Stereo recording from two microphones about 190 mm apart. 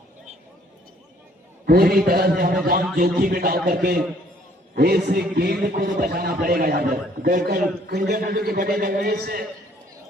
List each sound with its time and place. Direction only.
1.6 s a man's voice: 50° right (ahead or behind)